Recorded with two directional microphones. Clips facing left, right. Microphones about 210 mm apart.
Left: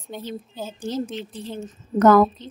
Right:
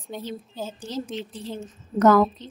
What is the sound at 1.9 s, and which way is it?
Speech, 55° left (ahead or behind).